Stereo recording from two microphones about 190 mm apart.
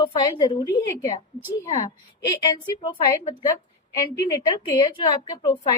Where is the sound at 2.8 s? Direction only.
20° left (ahead or behind).